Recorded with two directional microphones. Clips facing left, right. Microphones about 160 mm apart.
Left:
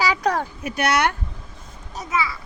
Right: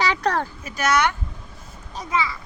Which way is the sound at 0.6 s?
65° left (ahead or behind).